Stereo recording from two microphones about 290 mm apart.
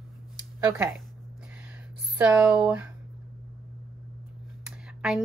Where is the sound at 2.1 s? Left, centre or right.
Centre.